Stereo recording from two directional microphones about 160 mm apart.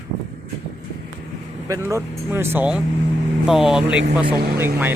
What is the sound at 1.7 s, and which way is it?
Speech, 15° right (ahead or behind).